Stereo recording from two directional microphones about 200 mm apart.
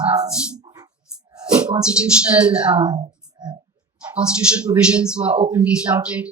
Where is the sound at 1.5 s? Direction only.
5° right (ahead or behind).